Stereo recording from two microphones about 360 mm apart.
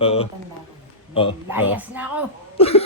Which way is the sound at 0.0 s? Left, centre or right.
Centre.